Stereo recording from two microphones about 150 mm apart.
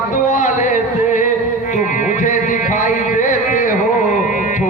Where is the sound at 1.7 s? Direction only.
55° left (ahead or behind).